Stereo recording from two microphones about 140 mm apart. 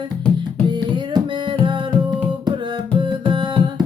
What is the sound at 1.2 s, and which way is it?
Music, 35° right (ahead or behind).